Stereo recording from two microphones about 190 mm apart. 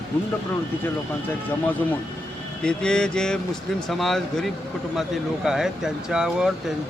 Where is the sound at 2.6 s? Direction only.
5° left (ahead or behind).